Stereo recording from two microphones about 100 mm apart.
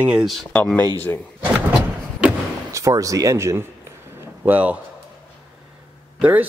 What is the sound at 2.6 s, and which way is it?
Speech, 30° right (ahead or behind).